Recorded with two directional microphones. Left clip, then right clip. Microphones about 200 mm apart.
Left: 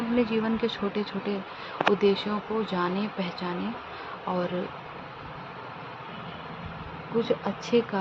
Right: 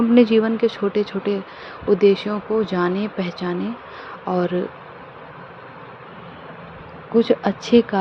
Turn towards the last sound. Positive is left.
turn(degrees=-35)  # may be behind; listen again after turning